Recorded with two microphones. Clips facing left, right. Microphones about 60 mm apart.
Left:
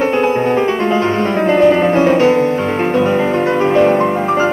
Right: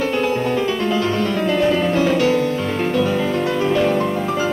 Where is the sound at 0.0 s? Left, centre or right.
Left.